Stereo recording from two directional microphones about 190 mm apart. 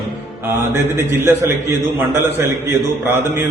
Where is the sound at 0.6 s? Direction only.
10° right (ahead or behind).